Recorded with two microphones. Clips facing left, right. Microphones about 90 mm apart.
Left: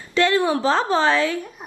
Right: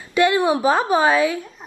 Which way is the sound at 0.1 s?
15° right (ahead or behind).